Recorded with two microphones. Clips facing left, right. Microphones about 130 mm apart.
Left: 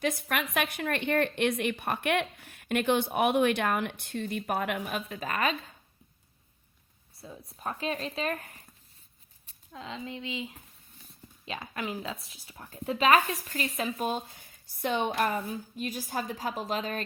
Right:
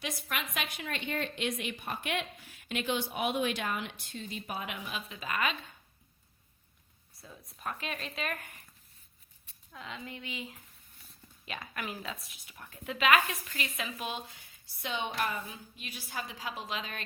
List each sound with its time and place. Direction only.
0.0 s speech: 50° left (ahead or behind)
7.5 s speech: 30° left (ahead or behind)